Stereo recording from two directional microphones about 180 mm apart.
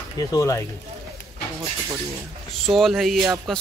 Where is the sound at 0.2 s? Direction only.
20° left (ahead or behind).